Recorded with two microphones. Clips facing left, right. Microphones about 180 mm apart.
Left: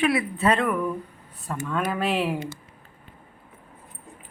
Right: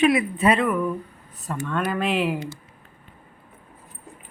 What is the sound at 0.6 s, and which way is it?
Speech, centre (ahead or behind).